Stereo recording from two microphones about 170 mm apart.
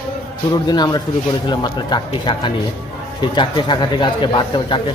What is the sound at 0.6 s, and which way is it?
A man's voice, 25° left (ahead or behind).